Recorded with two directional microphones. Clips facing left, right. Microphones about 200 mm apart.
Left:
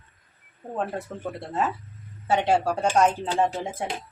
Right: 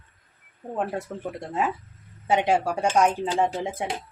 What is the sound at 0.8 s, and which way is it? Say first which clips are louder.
Speech: right 1 dB; 15° right (ahead or behind).